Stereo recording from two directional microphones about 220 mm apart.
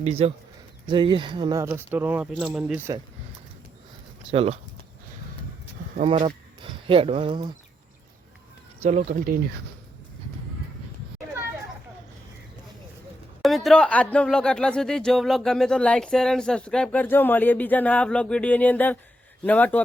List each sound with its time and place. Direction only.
0.0 s speech: 30° right (ahead or behind); by 3.0 s 10° right (ahead or behind)
4.3 s speech: 25° right (ahead or behind)
6.1 s speech: 25° right (ahead or behind)
8.8 s speech: 30° right (ahead or behind)
13.4 s a man's voice: centre (ahead or behind)